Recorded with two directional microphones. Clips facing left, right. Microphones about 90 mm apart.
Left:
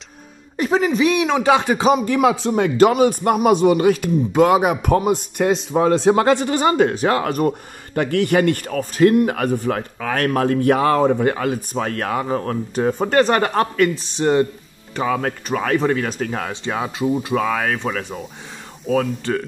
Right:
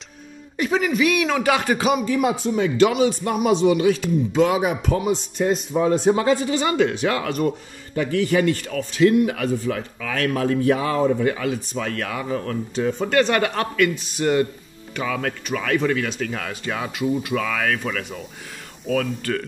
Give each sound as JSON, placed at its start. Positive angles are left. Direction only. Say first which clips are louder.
{"t": 0.6, "sound": "speech", "louder": "left 3 dB", "side_deg": 35}
{"t": 2.0, "sound": "speech", "louder": "left 4 dB", "side_deg": 90}
{"t": 2.5, "sound": "speech", "louder": "left 1 dB", "side_deg": 50}
{"t": 5.4, "sound": "speech", "louder": "left 3 dB", "side_deg": 85}
{"t": 6.6, "sound": "speech", "louder": "left 4 dB", "side_deg": 40}